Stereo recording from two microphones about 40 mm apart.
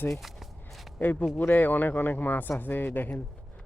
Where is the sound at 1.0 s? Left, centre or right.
Left.